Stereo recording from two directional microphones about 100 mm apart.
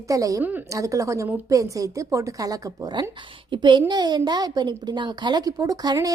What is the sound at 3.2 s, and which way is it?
A woman's voice, 50° right (ahead or behind).